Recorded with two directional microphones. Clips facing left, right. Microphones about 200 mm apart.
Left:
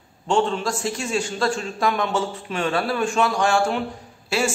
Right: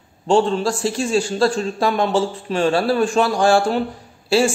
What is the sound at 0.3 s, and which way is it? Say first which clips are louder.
A man's voice: right 5 dB; 35° right (ahead or behind).